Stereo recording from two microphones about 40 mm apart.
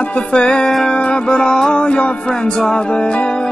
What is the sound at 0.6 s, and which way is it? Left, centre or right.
Music, centre.